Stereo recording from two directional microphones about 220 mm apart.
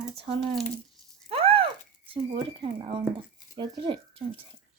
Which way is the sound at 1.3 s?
25° right (ahead or behind).